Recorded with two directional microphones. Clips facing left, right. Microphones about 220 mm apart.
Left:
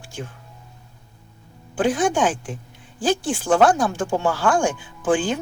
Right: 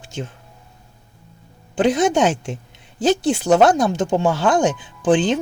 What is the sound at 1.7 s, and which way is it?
Speech, 20° right (ahead or behind).